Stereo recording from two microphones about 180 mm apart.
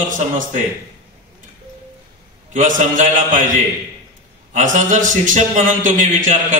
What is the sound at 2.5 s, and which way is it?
Mantra, 45° right (ahead or behind).